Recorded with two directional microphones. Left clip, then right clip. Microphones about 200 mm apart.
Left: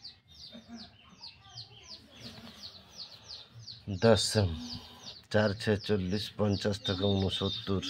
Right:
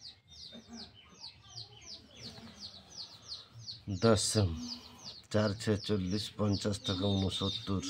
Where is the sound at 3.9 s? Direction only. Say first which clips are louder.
Left 4 dB; 20° left (ahead or behind).